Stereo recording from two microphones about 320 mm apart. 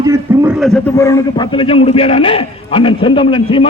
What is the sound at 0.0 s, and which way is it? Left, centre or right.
A man's voice, centre.